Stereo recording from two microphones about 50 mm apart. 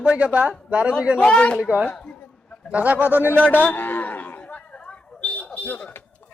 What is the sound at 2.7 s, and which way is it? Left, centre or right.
Speech, right.